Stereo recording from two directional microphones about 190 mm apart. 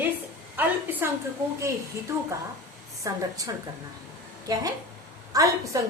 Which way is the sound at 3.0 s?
20° right (ahead or behind).